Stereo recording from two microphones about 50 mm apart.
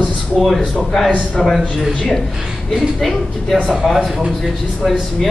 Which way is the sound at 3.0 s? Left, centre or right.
Centre.